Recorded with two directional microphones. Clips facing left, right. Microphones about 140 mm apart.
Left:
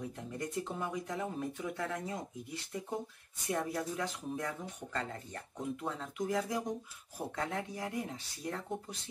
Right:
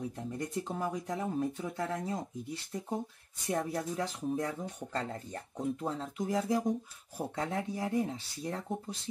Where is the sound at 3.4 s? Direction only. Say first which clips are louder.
Right 2 dB; 35° right (ahead or behind).